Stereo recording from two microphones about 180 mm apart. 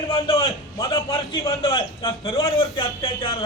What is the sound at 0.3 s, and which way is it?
A man's voice, 30° left (ahead or behind).